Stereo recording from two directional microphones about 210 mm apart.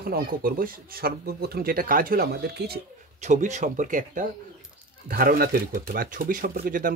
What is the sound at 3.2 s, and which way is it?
Speech, 35° right (ahead or behind).